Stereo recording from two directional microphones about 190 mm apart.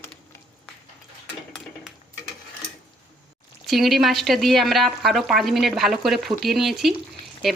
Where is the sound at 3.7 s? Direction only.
Centre (ahead or behind).